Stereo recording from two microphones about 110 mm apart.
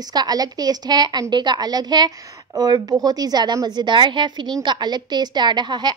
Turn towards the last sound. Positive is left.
turn(degrees=-45)  # may be behind; listen again after turning